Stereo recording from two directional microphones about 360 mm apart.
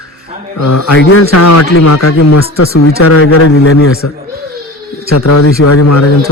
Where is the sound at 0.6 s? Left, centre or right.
Left.